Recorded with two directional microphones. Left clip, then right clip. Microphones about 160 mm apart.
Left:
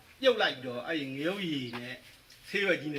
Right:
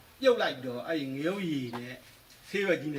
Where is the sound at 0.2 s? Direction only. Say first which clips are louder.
Right 1 dB; 25° right (ahead or behind).